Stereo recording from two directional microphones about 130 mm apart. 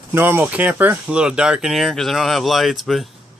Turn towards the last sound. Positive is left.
turn(degrees=0)  # may be behind; listen again after turning